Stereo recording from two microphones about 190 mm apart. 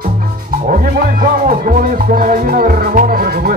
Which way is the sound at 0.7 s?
45° right (ahead or behind).